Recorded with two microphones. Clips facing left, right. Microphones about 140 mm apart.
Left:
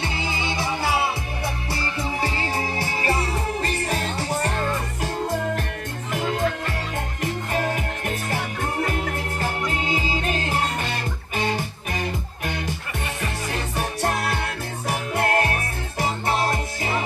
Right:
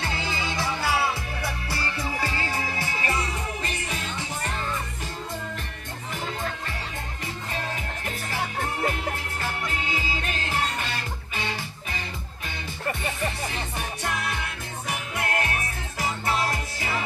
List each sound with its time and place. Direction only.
0.2 s music: 20° left (ahead or behind); by 4.7 s 40° left (ahead or behind)
6.1 s music: 60° left (ahead or behind)
13.5 s music: 40° left (ahead or behind)